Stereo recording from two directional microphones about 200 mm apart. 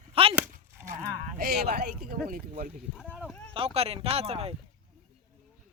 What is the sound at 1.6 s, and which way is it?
Speech, 45° right (ahead or behind).